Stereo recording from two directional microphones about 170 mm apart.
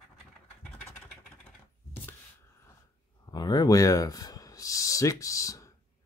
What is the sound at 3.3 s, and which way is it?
Speech, 25° left (ahead or behind).